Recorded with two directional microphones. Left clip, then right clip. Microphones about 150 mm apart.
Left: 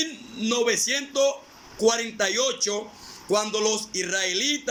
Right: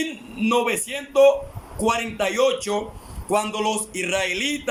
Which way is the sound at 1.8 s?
45° right (ahead or behind).